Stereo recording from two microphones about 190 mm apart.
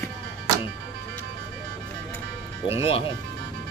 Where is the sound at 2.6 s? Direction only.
30° left (ahead or behind).